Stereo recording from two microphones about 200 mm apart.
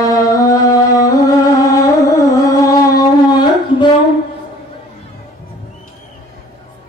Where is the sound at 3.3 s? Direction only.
20° left (ahead or behind).